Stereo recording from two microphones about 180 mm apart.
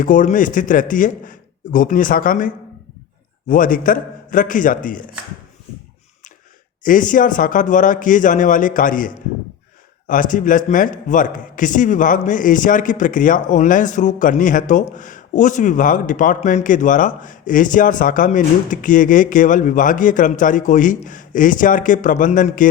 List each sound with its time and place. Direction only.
0.0 s a man's voice: 45° left (ahead or behind)
3.5 s a man's voice: 50° left (ahead or behind)
6.8 s a man's voice: 45° left (ahead or behind)